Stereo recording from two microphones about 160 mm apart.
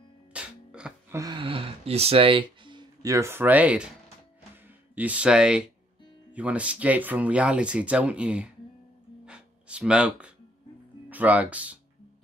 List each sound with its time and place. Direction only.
0.3 s music: 5° right (ahead or behind)
1.1 s speech: 25° right (ahead or behind); by 3.9 s 10° right (ahead or behind)
4.9 s speech: 10° right (ahead or behind)
9.2 s music: 5° right (ahead or behind)
11.1 s speech: 10° right (ahead or behind)